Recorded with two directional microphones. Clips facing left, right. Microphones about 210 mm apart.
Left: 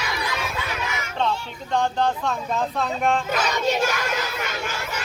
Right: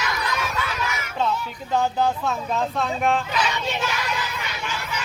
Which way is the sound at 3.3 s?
45° left (ahead or behind).